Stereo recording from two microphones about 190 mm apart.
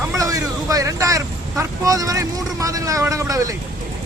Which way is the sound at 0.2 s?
15° right (ahead or behind).